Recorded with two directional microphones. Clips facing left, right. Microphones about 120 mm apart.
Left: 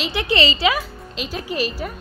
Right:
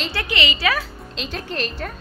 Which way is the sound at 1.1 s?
5° left (ahead or behind).